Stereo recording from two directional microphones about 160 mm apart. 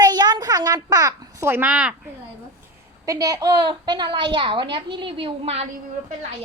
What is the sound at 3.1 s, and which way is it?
A child's voice, 20° right (ahead or behind).